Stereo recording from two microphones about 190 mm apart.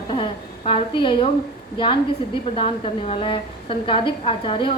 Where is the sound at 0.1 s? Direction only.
30° left (ahead or behind).